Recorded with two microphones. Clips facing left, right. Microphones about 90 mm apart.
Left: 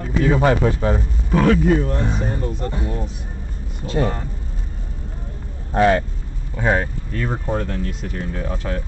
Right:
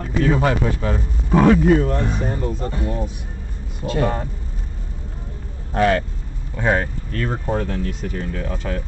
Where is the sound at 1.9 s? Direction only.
10° left (ahead or behind).